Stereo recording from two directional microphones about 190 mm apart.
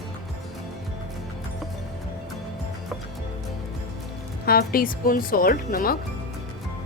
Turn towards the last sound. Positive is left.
turn(degrees=50)  # may be behind; listen again after turning